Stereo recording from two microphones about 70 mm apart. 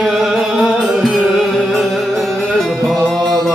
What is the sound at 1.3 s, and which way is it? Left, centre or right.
Music, centre.